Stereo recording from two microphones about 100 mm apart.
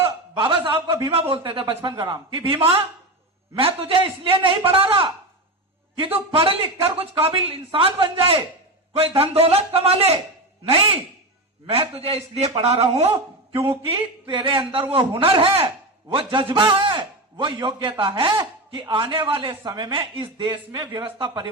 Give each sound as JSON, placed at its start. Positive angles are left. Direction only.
{"t": 0.0, "sound": "a sound", "side_deg": -60}
{"t": 1.0, "sound": "a man's voice", "side_deg": -70}
{"t": 6.3, "sound": "a man's voice", "side_deg": -65}
{"t": 9.0, "sound": "a man's voice", "side_deg": -85}
{"t": 10.7, "sound": "a man's voice", "side_deg": -70}